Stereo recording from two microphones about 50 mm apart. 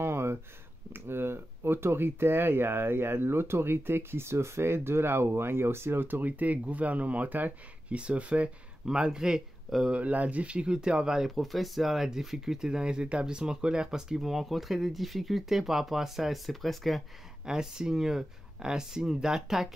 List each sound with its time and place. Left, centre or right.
0.0 s a sound: right
0.9 s speech: right
7.9 s speech: right
8.8 s speech: centre
9.8 s speech: right; by 17.0 s centre
17.5 s speech: centre